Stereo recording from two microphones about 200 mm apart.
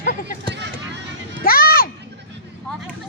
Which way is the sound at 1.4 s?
45° left (ahead or behind).